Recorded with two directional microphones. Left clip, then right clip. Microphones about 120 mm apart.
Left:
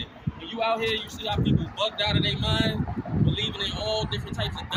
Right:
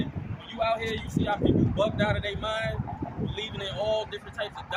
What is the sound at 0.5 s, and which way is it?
Speech, 25° right (ahead or behind).